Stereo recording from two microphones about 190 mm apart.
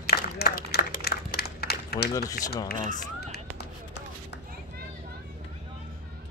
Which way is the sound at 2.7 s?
55° left (ahead or behind).